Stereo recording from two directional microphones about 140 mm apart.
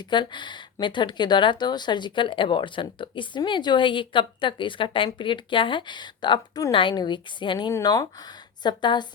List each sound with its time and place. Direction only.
0.0 s speech: 35° left (ahead or behind)